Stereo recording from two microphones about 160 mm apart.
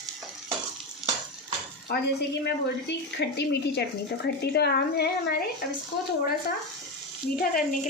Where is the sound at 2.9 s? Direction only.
90° left.